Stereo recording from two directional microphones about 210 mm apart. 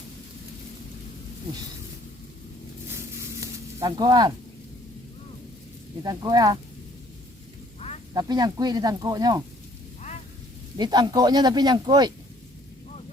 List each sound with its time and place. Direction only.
3.4 s sizzle: 20° right (ahead or behind)
6.0 s speech: 20° right (ahead or behind)
8.1 s speech: 20° right (ahead or behind)
10.8 s speech: 20° right (ahead or behind)